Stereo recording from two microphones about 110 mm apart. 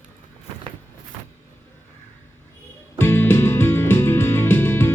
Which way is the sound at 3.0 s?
20° left (ahead or behind).